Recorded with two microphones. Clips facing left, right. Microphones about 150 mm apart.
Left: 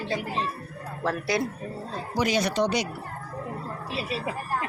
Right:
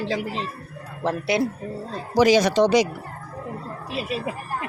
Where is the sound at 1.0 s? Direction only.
25° right (ahead or behind).